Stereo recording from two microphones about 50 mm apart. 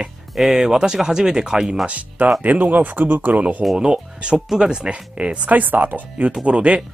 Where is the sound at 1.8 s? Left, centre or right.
Right.